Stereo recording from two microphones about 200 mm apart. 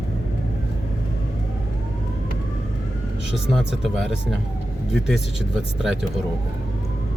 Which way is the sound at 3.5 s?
Centre (ahead or behind).